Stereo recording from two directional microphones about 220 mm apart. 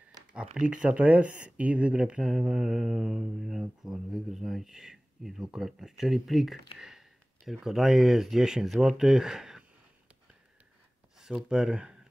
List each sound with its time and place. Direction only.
0.6 s speech: 5° right (ahead or behind)
11.1 s speech: centre (ahead or behind)